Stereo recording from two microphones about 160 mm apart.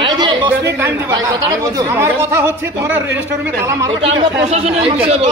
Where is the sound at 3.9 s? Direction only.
35° right (ahead or behind).